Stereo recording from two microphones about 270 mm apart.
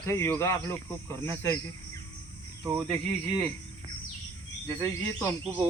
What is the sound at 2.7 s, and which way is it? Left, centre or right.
Speech, centre.